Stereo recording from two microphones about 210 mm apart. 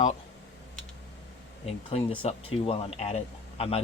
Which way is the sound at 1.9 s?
25° left (ahead or behind).